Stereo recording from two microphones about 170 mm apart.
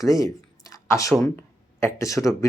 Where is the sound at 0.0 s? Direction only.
20° left (ahead or behind).